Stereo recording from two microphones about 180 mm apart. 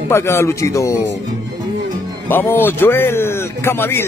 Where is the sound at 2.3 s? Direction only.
10° left (ahead or behind).